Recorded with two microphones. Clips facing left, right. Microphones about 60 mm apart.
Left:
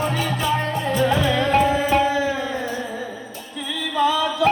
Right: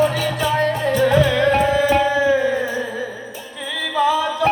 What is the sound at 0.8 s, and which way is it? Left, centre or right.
Music, right.